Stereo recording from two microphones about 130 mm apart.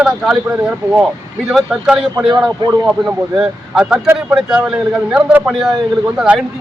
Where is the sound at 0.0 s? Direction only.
5° right (ahead or behind).